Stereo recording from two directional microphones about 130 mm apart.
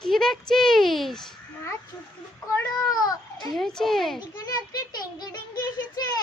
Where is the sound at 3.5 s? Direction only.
5° left (ahead or behind).